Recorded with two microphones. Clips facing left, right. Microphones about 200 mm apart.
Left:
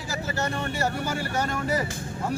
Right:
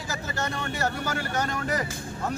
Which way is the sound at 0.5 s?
10° left (ahead or behind).